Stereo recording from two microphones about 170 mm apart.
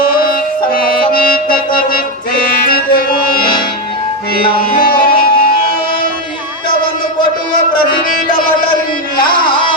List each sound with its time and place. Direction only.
0.1 s music: 60° left (ahead or behind)
4.7 s music: 60° left (ahead or behind)
7.8 s music: 50° left (ahead or behind)